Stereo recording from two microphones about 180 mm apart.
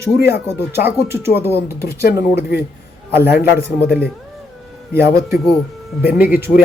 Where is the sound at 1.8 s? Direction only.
60° left (ahead or behind).